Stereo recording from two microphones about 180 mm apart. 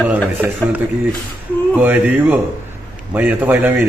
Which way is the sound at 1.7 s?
10° right (ahead or behind).